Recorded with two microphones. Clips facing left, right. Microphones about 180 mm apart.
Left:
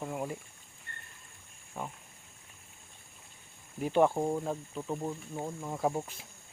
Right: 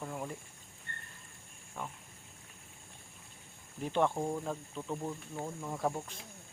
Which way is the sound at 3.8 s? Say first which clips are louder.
Left 5 dB; 10° left (ahead or behind).